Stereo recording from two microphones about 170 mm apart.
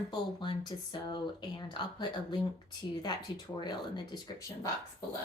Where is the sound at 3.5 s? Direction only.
25° left (ahead or behind).